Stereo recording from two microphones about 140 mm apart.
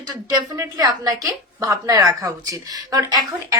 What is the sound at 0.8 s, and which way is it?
A woman's voice, 30° right (ahead or behind).